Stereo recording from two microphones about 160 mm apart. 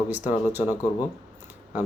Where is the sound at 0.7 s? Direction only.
20° left (ahead or behind).